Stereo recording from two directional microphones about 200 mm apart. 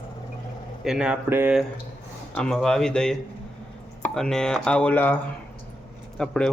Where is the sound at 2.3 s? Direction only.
5° left (ahead or behind).